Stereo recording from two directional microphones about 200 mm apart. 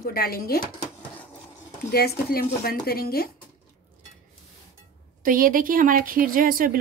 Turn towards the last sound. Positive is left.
turn(degrees=-45)  # may be behind; listen again after turning